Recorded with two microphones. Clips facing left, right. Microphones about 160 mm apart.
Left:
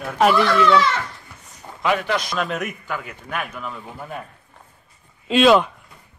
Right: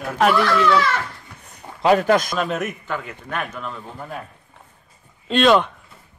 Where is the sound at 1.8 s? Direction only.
40° right (ahead or behind).